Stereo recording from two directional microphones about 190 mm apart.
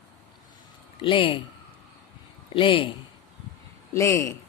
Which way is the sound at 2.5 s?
30° left (ahead or behind).